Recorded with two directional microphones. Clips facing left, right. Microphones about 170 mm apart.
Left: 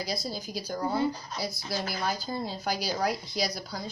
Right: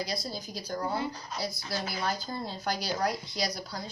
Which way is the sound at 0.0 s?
5° left (ahead or behind).